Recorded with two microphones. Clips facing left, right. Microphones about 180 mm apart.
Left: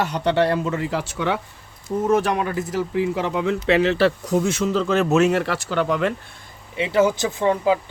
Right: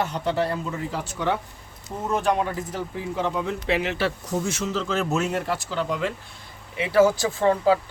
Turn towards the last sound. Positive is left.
turn(degrees=20)  # may be behind; listen again after turning